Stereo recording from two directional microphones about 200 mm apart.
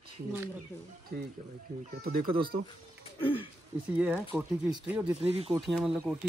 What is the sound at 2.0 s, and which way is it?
Speech, 50° right (ahead or behind).